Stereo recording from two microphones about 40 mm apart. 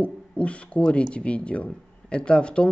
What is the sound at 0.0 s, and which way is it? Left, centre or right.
Speech, left.